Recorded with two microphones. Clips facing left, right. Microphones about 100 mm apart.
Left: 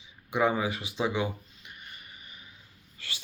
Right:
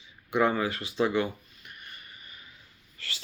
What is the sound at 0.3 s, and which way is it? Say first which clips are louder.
Speech: right 1 dB; 15° left (ahead or behind).